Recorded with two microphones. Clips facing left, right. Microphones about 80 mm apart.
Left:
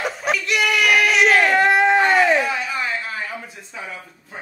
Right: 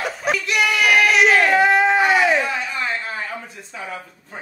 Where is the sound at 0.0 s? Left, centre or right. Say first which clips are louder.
Even; centre.